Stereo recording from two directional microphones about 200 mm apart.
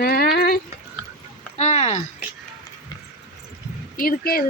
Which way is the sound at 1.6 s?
35° left (ahead or behind).